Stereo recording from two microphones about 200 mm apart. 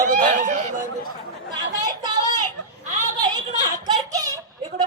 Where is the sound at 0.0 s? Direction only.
40° right (ahead or behind).